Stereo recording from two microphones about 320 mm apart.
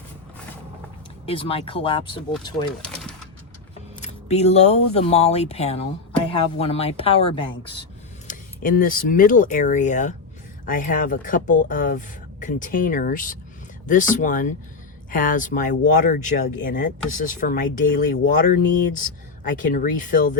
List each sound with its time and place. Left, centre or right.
1.3 s a woman's voice: centre
4.0 s a woman's voice: centre
8.3 s speech: left